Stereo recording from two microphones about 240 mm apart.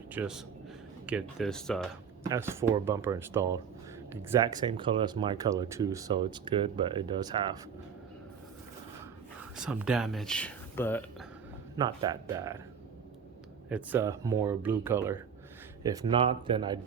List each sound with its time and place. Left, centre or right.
0.1 s a man's voice: centre
2.2 s speech: centre
9.6 s speech: centre
11.8 s speech: centre
13.7 s speech: centre